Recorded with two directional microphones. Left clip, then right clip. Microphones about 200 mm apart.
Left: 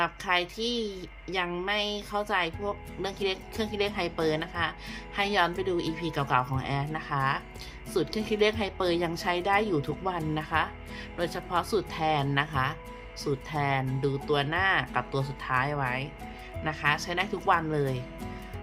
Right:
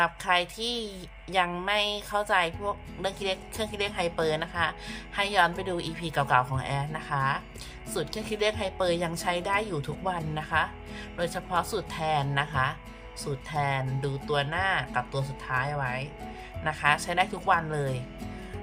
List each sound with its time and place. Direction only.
0.0 s a woman's voice: 10° right (ahead or behind)